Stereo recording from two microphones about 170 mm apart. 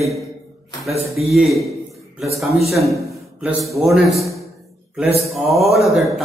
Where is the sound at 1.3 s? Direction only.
Centre (ahead or behind).